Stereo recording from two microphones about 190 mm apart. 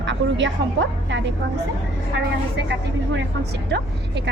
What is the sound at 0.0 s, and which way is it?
A woman's voice, 70° right (ahead or behind).